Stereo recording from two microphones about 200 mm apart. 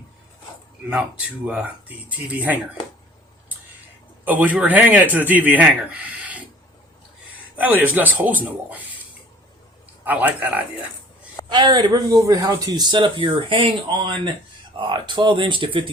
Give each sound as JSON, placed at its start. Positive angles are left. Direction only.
{"t": 1.5, "sound": "speech", "side_deg": -5}
{"t": 4.3, "sound": "speech", "side_deg": -10}
{"t": 7.5, "sound": "speech", "side_deg": -10}
{"t": 10.0, "sound": "speech", "side_deg": -10}
{"t": 11.4, "sound": "speech", "side_deg": -20}